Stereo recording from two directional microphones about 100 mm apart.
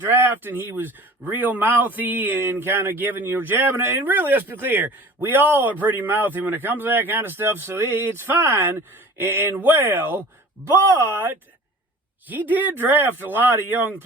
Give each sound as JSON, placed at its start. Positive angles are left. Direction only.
{"t": 0.0, "sound": "speech", "side_deg": -20}